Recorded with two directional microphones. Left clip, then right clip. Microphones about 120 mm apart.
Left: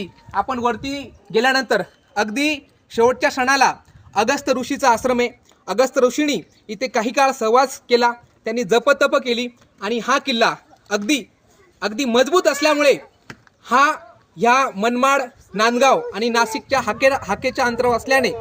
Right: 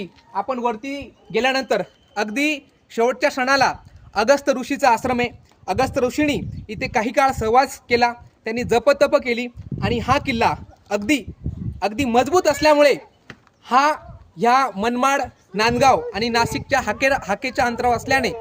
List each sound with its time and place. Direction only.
0.3 s speech: 55° left (ahead or behind)
1.3 s speech: 40° left (ahead or behind)
2.1 s a man's voice: 25° left (ahead or behind); by 18.3 s 30° right (ahead or behind)